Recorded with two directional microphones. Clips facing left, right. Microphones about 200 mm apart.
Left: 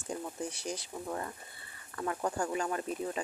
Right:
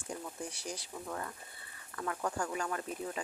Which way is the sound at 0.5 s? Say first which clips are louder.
Left 4 dB; 25° left (ahead or behind).